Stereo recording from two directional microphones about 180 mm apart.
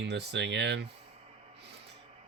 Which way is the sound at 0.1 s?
70° right (ahead or behind).